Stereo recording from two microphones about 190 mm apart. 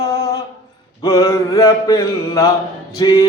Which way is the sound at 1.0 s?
15° left (ahead or behind).